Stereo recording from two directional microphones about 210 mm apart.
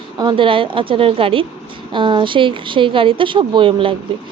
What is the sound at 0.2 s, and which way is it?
Speech, 20° right (ahead or behind).